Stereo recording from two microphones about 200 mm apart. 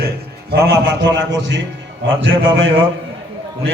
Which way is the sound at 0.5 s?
55° right (ahead or behind).